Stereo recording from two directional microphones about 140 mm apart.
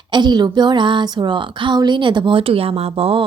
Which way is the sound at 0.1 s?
30° right (ahead or behind).